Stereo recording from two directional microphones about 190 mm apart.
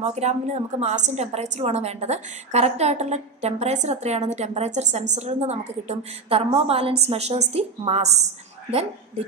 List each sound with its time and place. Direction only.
0.0 s a woman's voice: 35° right (ahead or behind)